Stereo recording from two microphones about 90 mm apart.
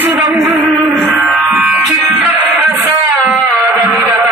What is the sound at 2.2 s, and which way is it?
Music, 20° right (ahead or behind).